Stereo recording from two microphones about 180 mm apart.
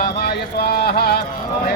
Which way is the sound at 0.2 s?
65° left (ahead or behind).